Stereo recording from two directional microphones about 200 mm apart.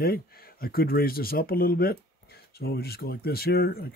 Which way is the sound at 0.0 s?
50° left (ahead or behind).